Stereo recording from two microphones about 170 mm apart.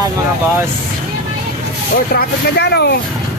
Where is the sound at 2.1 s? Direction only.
75° left (ahead or behind).